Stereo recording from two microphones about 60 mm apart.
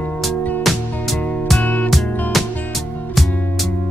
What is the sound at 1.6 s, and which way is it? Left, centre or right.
Music, left.